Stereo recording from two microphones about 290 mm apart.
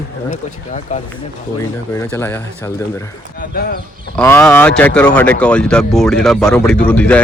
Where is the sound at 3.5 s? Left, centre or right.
Left.